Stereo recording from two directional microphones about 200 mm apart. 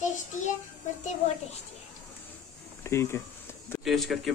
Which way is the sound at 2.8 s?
15° left (ahead or behind).